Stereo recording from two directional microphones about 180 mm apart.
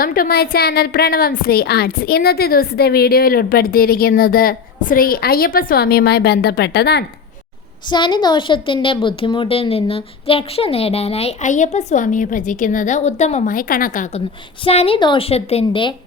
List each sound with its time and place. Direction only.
0.0 s a woman's voice: 55° left (ahead or behind)
7.9 s a woman's voice: 25° left (ahead or behind); by 14.2 s 45° left (ahead or behind)
14.6 s a woman's voice: 35° left (ahead or behind)